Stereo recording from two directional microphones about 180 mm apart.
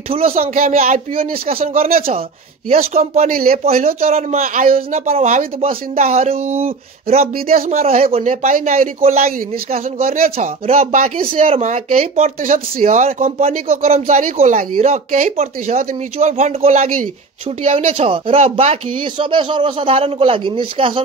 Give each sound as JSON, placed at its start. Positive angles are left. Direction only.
{"t": 0.1, "sound": "speech", "side_deg": -35}
{"t": 3.0, "sound": "speech", "side_deg": -50}
{"t": 3.6, "sound": "speech", "side_deg": -35}
{"t": 4.4, "sound": "speech", "side_deg": -45}
{"t": 7.3, "sound": "a man's voice", "side_deg": -55}
{"t": 7.7, "sound": "speech", "side_deg": -35}
{"t": 14.6, "sound": "speech", "side_deg": -50}